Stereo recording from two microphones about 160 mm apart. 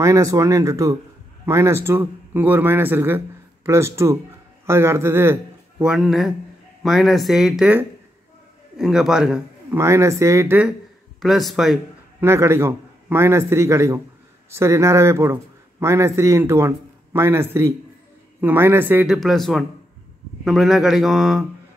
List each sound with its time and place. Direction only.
0.0 s a man's voice: 20° right (ahead or behind); by 9.4 s 5° right (ahead or behind)
9.7 s a man's voice: 15° right (ahead or behind)
11.1 s speech: centre (ahead or behind)
12.2 s a man's voice: 15° right (ahead or behind)
19.1 s speech: centre (ahead or behind)